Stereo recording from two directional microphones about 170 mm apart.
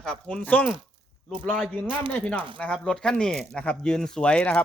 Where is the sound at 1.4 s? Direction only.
10° left (ahead or behind).